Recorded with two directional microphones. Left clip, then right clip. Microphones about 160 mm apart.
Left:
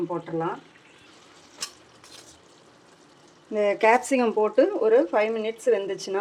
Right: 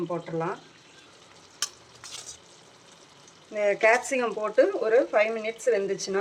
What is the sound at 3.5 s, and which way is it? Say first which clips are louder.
Speech: left 2 dB; 60° left (ahead or behind).